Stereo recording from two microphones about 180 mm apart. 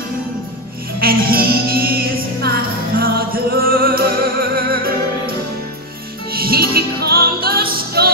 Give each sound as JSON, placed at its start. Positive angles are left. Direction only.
{"t": 0.9, "sound": "music", "side_deg": -55}
{"t": 6.3, "sound": "music", "side_deg": -55}